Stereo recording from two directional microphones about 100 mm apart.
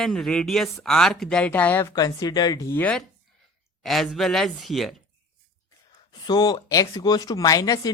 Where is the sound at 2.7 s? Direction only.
15° left (ahead or behind).